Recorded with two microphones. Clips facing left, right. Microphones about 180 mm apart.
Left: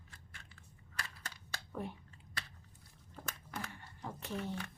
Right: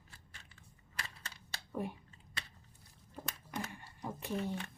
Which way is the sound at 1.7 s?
10° right (ahead or behind).